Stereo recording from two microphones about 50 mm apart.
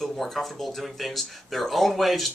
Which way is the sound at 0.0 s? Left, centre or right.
Centre.